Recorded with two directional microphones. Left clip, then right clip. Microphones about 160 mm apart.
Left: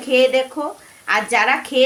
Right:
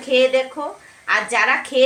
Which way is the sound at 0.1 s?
55° left (ahead or behind).